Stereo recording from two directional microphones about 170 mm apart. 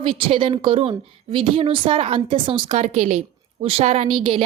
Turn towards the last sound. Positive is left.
turn(degrees=-35)  # may be behind; listen again after turning